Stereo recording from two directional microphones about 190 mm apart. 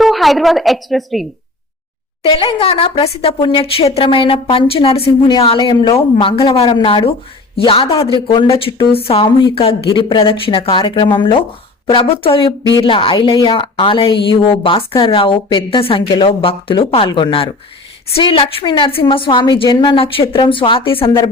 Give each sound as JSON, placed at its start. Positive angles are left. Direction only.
{"t": 0.0, "sound": "a woman's voice", "side_deg": 0}
{"t": 2.2, "sound": "a woman's voice", "side_deg": 25}